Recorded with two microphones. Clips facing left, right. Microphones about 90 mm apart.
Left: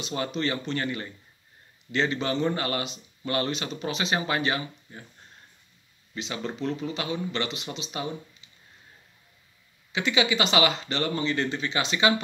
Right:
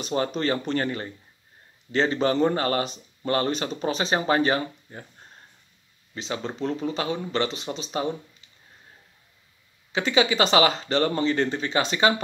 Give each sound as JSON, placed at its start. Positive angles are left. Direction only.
{"t": 0.0, "sound": "a man's voice", "side_deg": -40}
{"t": 6.1, "sound": "a man's voice", "side_deg": -35}
{"t": 9.9, "sound": "a man's voice", "side_deg": -40}